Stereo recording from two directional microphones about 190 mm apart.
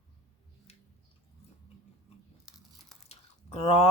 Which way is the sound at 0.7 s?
30° left (ahead or behind).